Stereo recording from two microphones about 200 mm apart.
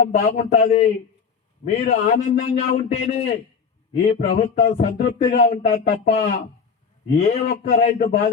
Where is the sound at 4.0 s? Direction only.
45° left (ahead or behind).